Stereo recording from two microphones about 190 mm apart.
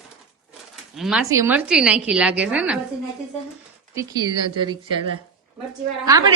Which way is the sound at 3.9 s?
20° right (ahead or behind).